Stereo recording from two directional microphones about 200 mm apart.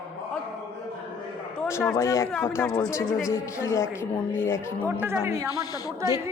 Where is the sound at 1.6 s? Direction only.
15° left (ahead or behind).